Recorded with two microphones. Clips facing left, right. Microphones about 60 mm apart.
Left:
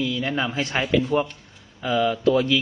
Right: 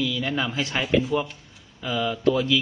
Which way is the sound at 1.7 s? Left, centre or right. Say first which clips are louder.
Left 5 dB; centre.